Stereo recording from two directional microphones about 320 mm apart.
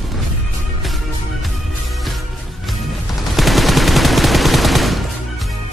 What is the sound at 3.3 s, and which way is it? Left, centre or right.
Gunshot, centre.